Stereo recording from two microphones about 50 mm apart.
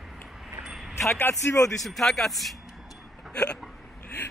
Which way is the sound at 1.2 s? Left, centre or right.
Left.